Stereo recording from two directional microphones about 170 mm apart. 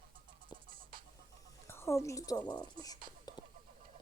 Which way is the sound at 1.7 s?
15° left (ahead or behind).